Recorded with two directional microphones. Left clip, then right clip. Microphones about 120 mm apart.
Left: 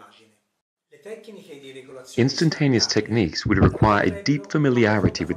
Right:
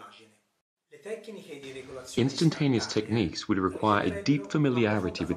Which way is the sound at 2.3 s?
40° left (ahead or behind).